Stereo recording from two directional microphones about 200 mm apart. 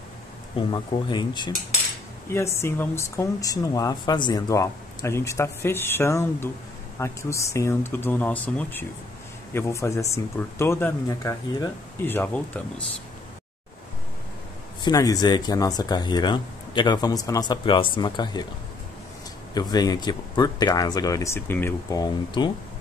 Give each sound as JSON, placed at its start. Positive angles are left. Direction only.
{"t": 0.6, "sound": "speech", "side_deg": 25}
{"t": 14.8, "sound": "speech", "side_deg": 20}
{"t": 19.5, "sound": "speech", "side_deg": 20}